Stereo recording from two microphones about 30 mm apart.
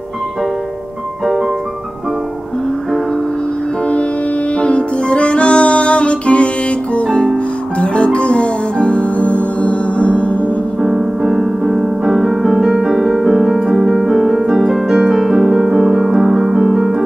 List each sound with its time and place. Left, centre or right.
4.6 s music: left
10.8 s music: centre
12.2 s piano: centre
12.9 s music: centre
14.0 s keyboard: centre
14.9 s keyboard: centre
15.8 s piano: centre
16.6 s keyboard: centre